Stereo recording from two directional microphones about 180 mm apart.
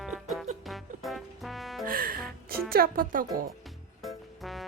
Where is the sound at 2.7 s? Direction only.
55° right (ahead or behind).